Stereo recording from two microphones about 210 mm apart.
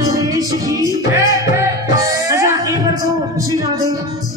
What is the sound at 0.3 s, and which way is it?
Music, 15° right (ahead or behind).